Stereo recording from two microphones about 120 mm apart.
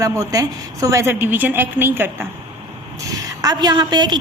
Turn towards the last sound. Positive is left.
turn(degrees=-35)  # may be behind; listen again after turning